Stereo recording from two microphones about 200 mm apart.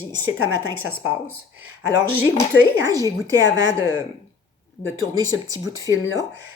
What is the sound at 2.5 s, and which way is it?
Speech, 15° right (ahead or behind).